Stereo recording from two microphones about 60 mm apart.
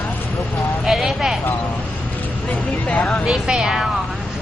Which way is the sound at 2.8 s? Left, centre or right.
Left.